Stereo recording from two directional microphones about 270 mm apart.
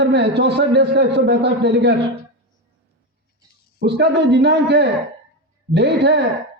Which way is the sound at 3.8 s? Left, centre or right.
Right.